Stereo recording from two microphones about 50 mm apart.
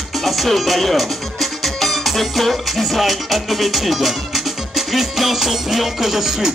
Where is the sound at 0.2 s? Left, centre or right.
Centre.